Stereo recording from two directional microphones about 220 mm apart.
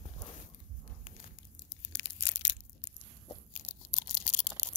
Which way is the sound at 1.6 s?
55° left (ahead or behind).